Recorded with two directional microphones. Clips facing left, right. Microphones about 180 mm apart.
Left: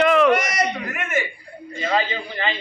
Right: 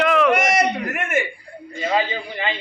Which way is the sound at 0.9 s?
50° right (ahead or behind).